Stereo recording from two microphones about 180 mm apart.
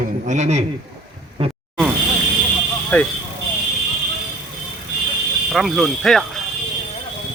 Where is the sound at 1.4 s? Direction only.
30° right (ahead or behind).